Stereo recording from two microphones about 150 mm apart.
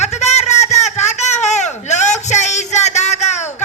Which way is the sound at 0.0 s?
50° left (ahead or behind).